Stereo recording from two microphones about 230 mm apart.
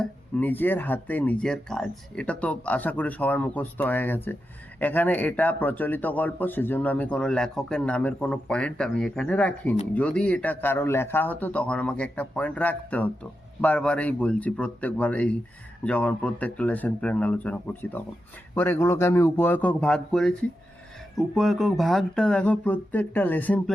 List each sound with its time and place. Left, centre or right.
0.0 s speech: centre